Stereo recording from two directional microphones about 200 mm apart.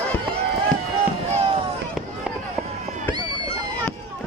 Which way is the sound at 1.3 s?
30° right (ahead or behind).